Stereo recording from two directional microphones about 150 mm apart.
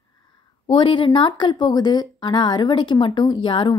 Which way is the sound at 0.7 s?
35° left (ahead or behind).